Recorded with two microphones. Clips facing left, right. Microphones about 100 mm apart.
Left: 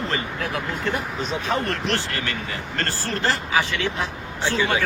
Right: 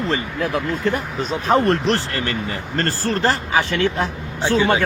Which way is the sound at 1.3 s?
40° right (ahead or behind).